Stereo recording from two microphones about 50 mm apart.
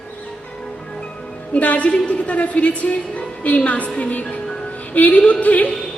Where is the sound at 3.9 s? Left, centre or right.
Left.